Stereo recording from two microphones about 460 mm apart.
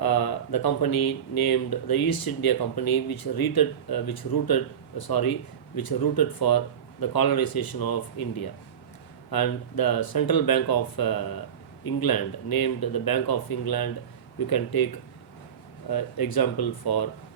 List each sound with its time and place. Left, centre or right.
0.0 s speech: left
15.9 s speech: left